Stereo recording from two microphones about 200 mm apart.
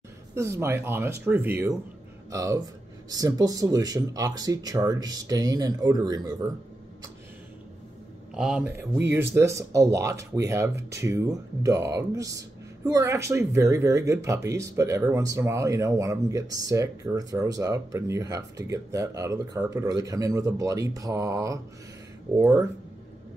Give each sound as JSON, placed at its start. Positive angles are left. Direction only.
{"t": 0.3, "sound": "speech", "side_deg": -15}
{"t": 8.4, "sound": "speech", "side_deg": -5}